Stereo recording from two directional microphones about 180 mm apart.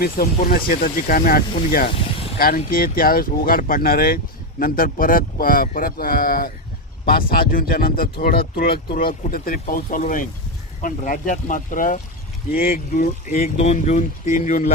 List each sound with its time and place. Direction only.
0.0 s speech: 55° left (ahead or behind)